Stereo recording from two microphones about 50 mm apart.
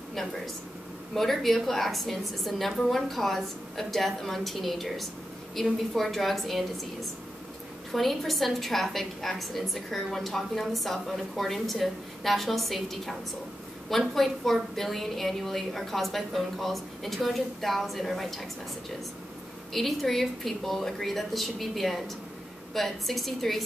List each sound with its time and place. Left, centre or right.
1.1 s a woman's voice: centre
7.9 s a woman's voice: centre
19.7 s a woman's voice: centre